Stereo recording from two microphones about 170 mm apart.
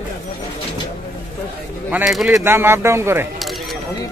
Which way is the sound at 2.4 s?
15° right (ahead or behind).